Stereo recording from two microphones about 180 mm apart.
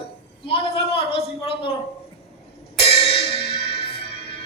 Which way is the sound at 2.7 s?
30° left (ahead or behind).